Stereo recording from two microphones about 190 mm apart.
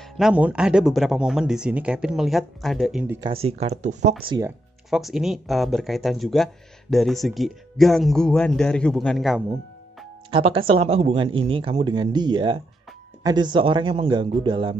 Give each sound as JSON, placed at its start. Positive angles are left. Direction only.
{"t": 0.0, "sound": "speech", "side_deg": -5}
{"t": 3.4, "sound": "speech", "side_deg": -35}
{"t": 4.2, "sound": "speech", "side_deg": -25}
{"t": 4.8, "sound": "speech", "side_deg": 0}
{"t": 10.7, "sound": "speech", "side_deg": -30}